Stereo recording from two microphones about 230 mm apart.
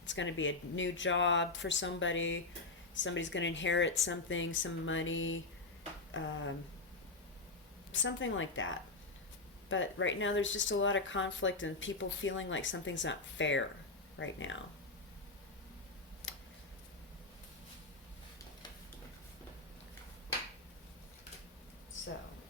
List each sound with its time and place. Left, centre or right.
0.1 s speech: left
7.9 s speech: left